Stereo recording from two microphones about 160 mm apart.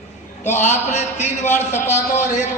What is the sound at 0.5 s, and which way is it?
A man's voice, 50° left (ahead or behind).